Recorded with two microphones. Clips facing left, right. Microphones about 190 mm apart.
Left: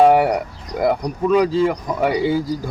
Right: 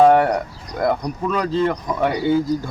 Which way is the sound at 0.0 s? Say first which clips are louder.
Even; 10° left (ahead or behind).